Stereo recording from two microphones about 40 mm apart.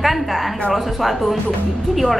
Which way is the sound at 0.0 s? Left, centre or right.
Centre.